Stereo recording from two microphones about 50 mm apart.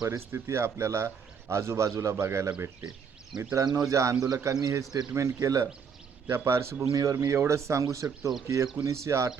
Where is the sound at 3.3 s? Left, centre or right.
Centre.